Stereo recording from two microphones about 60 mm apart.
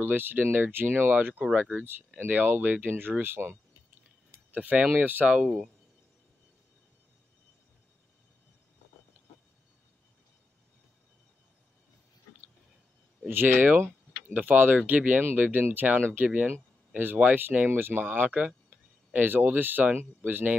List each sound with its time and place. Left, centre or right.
0.0 s speech: right
4.5 s speech: right
5.4 s speech: centre
13.3 s speech: right